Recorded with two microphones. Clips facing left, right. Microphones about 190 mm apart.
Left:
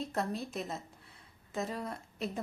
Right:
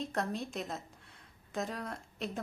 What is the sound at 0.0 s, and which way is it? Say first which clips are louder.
A woman's voice: even; centre (ahead or behind).